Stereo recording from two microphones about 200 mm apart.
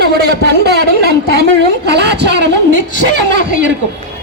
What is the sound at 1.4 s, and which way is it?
Vehicle, 55° right (ahead or behind).